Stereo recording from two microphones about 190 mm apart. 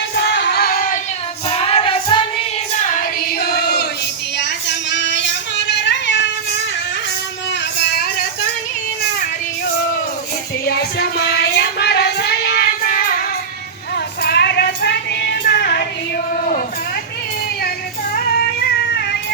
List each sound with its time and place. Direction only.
0.2 s singing: 65° left (ahead or behind)
1.5 s child singing: 30° left (ahead or behind)
3.2 s choir: 55° left (ahead or behind)
4.4 s child singing: 65° left (ahead or behind)
10.7 s child singing: 55° left (ahead or behind)